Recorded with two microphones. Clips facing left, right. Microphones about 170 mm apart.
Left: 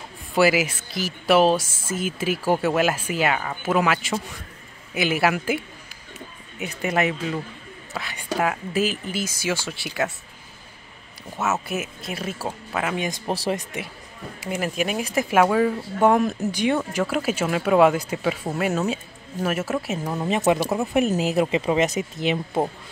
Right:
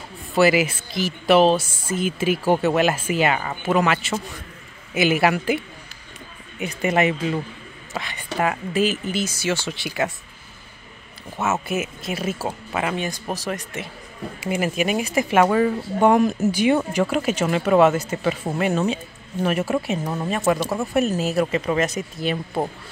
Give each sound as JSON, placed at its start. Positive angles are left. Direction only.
{"t": 0.3, "sound": "speech", "side_deg": 5}
{"t": 6.6, "sound": "speech", "side_deg": 0}
{"t": 11.3, "sound": "speech", "side_deg": 0}
{"t": 13.1, "sound": "speech", "side_deg": 30}
{"t": 14.4, "sound": "speech", "side_deg": 0}
{"t": 20.2, "sound": "speech", "side_deg": 20}